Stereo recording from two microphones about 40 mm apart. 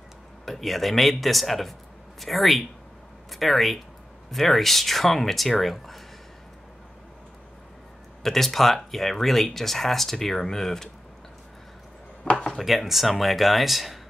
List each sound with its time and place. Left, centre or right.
0.5 s a man's voice: centre
8.2 s speech: centre
12.3 s a sound: left
12.5 s speech: centre